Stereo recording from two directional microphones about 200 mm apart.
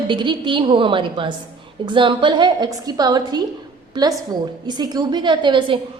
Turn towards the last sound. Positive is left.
turn(degrees=-25)  # may be behind; listen again after turning